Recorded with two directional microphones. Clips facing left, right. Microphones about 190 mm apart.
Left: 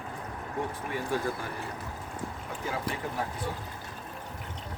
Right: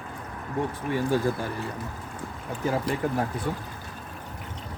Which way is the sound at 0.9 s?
30° right (ahead or behind).